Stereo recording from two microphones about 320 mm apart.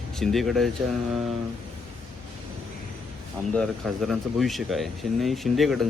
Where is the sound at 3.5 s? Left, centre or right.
Centre.